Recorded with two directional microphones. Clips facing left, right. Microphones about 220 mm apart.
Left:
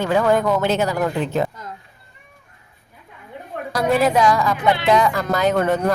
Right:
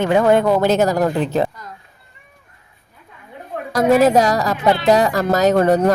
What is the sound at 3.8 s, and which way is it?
Speech, 40° right (ahead or behind).